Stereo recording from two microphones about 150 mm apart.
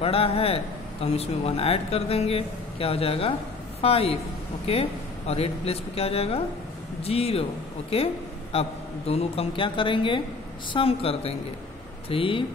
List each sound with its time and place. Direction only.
0.0 s speech: 40° left (ahead or behind)